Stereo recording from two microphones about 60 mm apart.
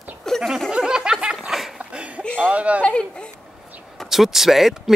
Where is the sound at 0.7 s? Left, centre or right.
Centre.